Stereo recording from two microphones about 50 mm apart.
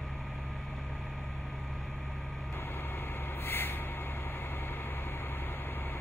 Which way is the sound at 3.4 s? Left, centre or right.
Left.